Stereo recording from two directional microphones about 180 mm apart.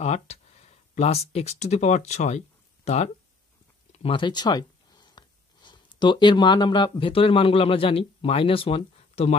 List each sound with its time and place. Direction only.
0.0 s speech: 40° left (ahead or behind)